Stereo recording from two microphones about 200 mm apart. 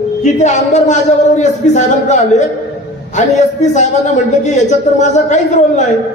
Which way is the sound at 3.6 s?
35° left (ahead or behind).